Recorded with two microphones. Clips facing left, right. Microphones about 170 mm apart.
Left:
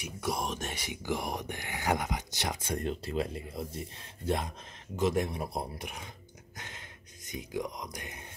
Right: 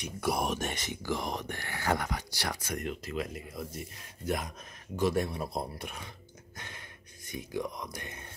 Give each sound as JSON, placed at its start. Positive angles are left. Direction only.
{"t": 0.0, "sound": "speech", "side_deg": 0}
{"t": 0.7, "sound": "speech", "side_deg": 15}
{"t": 4.9, "sound": "speech", "side_deg": 20}
{"t": 6.5, "sound": "a sound", "side_deg": 20}
{"t": 7.2, "sound": "speech", "side_deg": 15}